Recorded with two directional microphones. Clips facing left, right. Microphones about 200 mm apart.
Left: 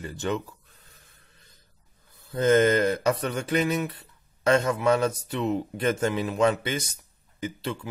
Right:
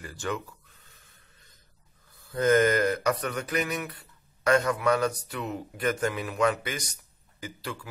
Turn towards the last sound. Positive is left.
turn(degrees=25)  # may be behind; listen again after turning